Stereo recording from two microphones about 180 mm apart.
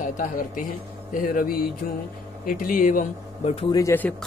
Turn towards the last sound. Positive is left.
turn(degrees=15)  # may be behind; listen again after turning